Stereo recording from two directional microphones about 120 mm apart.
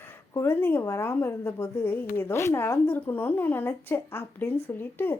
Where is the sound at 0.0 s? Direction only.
20° left (ahead or behind).